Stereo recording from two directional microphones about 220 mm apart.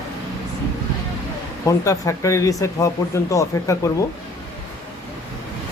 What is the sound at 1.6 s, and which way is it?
Speech, 15° left (ahead or behind).